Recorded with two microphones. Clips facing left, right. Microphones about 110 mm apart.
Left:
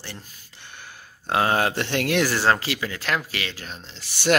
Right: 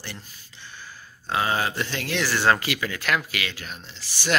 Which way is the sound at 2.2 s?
35° left (ahead or behind).